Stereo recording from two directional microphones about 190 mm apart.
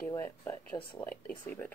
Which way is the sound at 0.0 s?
15° left (ahead or behind).